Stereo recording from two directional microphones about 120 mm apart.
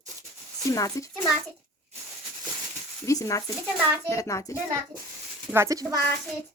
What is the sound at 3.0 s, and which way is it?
A child's voice, 25° left (ahead or behind).